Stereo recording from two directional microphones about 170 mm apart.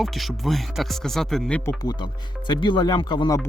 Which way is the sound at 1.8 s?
25° left (ahead or behind).